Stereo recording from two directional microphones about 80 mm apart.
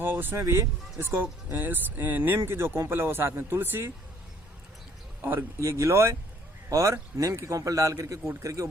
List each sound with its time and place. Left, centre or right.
0.0 s speech: right
0.3 s speech: right
5.2 s speech: right
5.5 s a man's voice: right